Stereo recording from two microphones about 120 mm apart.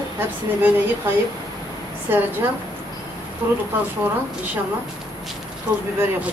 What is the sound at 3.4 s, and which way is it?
Speech, 15° right (ahead or behind).